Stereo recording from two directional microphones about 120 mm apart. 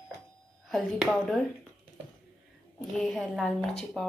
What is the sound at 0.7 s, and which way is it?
A woman's voice, centre (ahead or behind).